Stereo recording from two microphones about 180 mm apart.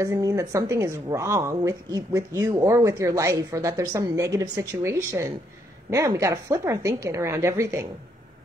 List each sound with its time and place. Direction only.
0.0 s speech: 20° right (ahead or behind)